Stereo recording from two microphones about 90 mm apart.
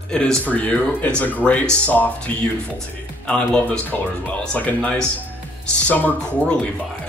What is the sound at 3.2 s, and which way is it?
Speech, 10° left (ahead or behind).